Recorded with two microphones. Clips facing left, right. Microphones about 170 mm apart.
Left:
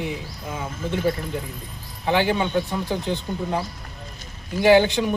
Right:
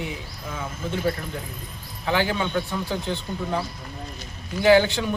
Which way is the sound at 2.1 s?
15° left (ahead or behind).